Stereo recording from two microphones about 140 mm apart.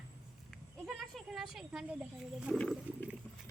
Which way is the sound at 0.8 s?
Centre (ahead or behind).